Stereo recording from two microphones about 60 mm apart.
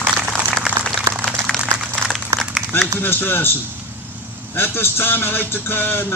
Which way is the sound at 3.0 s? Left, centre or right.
Left.